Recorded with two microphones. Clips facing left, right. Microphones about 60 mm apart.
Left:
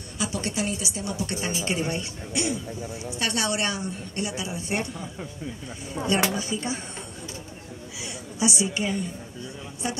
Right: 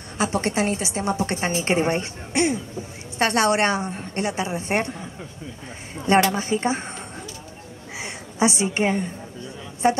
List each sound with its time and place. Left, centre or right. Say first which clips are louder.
0.2 s a woman's voice: right 6 dB; right
6.0 s speech: right 2 dB; left
6.3 s a woman's voice: right 6 dB; right
8.0 s a woman's voice: right 5 dB; right